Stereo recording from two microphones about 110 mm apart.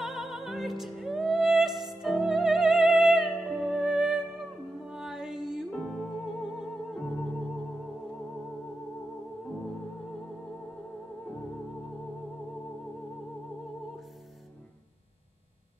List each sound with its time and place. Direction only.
0.0 s music: centre (ahead or behind)
5.7 s music: 5° left (ahead or behind)